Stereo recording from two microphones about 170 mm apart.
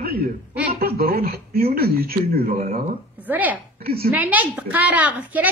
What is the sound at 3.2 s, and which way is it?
Speech, 10° right (ahead or behind).